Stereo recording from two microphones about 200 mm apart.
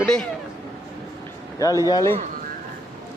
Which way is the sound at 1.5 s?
15° left (ahead or behind).